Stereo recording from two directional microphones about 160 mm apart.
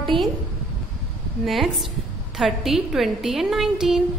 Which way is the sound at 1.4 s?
Centre (ahead or behind).